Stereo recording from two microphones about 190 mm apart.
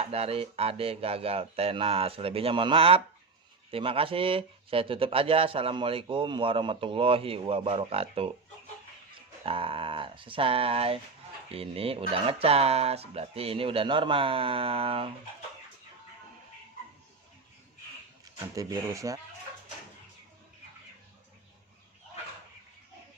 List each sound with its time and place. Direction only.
0.0 s speech: 30° right (ahead or behind)
9.4 s speech: 30° right (ahead or behind)
18.5 s speech: 20° right (ahead or behind)